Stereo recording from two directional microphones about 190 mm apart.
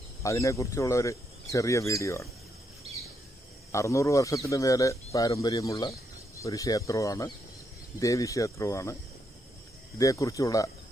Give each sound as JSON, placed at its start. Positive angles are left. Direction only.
{"t": 0.2, "sound": "speech", "side_deg": 15}
{"t": 3.7, "sound": "speech", "side_deg": 15}
{"t": 9.9, "sound": "speech", "side_deg": 15}